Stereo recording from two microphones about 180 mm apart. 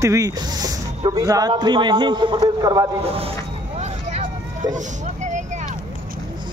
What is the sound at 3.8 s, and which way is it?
Vehicle, 40° right (ahead or behind).